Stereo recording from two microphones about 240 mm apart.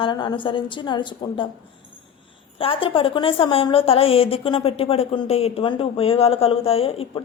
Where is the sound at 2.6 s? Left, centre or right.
Left.